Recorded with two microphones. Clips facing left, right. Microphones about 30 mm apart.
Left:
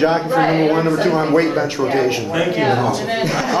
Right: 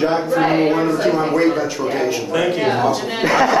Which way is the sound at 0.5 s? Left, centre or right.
Centre.